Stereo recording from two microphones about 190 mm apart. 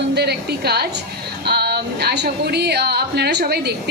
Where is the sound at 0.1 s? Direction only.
60° right (ahead or behind).